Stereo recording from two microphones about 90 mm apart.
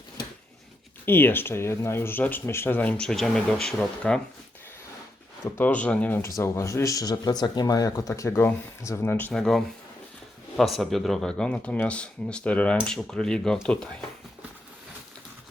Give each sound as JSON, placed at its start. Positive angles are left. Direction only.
{"t": 1.0, "sound": "speech", "side_deg": 25}
{"t": 3.1, "sound": "speech", "side_deg": 5}
{"t": 5.5, "sound": "speech", "side_deg": 15}
{"t": 6.2, "sound": "speech", "side_deg": 35}
{"t": 9.3, "sound": "speech", "side_deg": 5}